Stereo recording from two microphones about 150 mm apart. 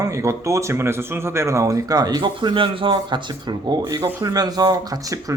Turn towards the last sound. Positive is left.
turn(degrees=-25)  # may be behind; listen again after turning